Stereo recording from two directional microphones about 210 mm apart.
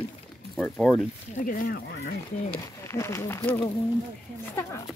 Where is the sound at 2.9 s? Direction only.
15° left (ahead or behind).